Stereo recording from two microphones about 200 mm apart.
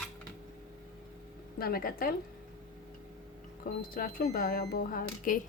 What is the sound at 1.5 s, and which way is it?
Speech, 50° left (ahead or behind).